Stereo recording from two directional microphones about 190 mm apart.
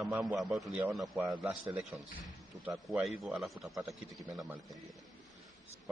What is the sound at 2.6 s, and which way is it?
Speech, centre (ahead or behind).